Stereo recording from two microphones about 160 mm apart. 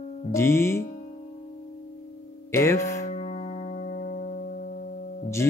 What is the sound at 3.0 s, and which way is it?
Music, 45° left (ahead or behind).